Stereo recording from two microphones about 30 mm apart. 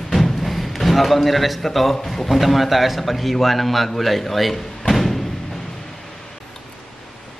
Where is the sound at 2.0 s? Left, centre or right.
Centre.